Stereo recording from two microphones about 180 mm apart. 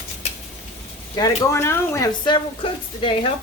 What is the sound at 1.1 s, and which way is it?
Speech, 20° left (ahead or behind).